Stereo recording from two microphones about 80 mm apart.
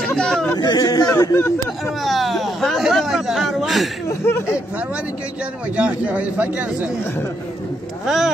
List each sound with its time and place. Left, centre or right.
0.2 s speech: centre
0.6 s speech: left
1.1 s speech: left
2.0 s speech: centre
4.1 s speech: left
5.8 s speech: centre
8.0 s speech: centre